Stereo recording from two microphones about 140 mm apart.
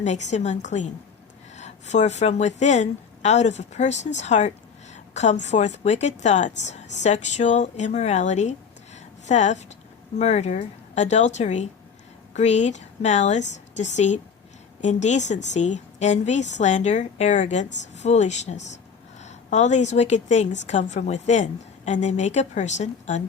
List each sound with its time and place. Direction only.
0.0 s speech: 55° left (ahead or behind)